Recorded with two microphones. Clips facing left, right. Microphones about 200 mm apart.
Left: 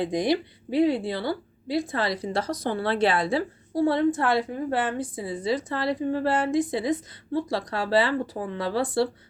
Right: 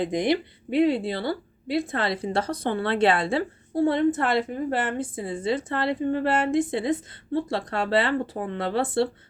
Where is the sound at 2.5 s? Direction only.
55° right (ahead or behind).